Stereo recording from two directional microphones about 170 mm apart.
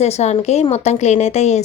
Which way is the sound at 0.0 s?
40° left (ahead or behind).